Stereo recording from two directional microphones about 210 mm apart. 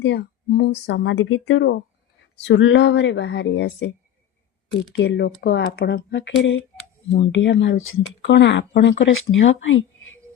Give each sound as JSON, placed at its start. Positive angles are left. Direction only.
{"t": 0.0, "sound": "speech", "side_deg": 50}
{"t": 4.9, "sound": "speech", "side_deg": 55}